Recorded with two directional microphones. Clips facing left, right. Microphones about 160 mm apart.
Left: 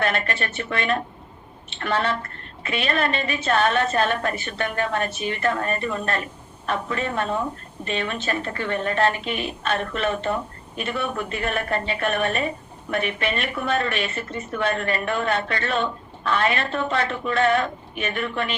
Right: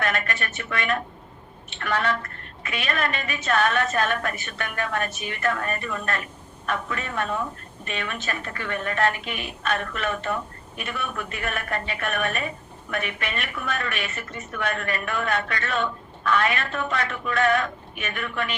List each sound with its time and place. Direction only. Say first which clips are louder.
0.0 s a woman's voice: left 3 dB; 30° left (ahead or behind)